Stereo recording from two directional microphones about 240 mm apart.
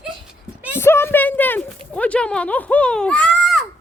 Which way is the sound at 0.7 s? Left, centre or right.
Centre.